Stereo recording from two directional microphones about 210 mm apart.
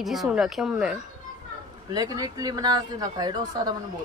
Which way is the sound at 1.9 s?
20° right (ahead or behind).